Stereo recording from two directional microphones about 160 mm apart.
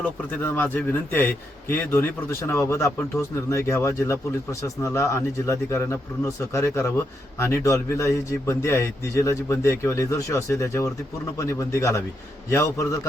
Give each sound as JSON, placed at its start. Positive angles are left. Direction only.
{"t": 0.0, "sound": "a man's voice", "side_deg": 10}